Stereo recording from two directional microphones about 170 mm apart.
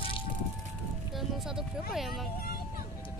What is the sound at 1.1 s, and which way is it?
Music, centre (ahead or behind).